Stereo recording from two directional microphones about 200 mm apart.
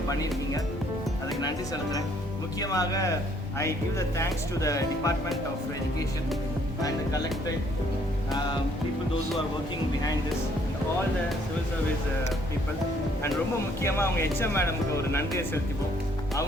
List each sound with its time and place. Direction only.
1.4 s speech: 20° left (ahead or behind)
13.8 s speech: 10° left (ahead or behind)